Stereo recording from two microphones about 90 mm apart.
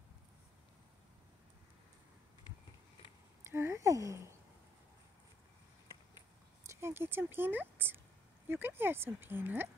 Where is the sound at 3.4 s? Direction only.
30° right (ahead or behind).